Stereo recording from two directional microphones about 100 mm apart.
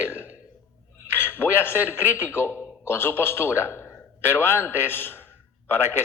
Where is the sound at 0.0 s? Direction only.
25° left (ahead or behind).